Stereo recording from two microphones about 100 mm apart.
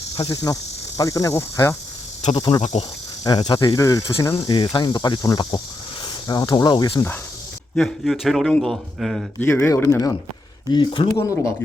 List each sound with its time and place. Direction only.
0.2 s speech: 40° left (ahead or behind)
2.3 s speech: 45° left (ahead or behind)
4.4 s speech: 55° left (ahead or behind)
7.8 s a man's voice: centre (ahead or behind)
9.6 s speech: 30° left (ahead or behind)
10.7 s speech: 55° left (ahead or behind)
11.1 s speech: 35° left (ahead or behind)